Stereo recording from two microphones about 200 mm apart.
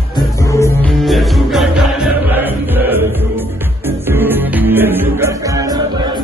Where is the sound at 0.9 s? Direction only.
Centre (ahead or behind); by 6.1 s 20° right (ahead or behind).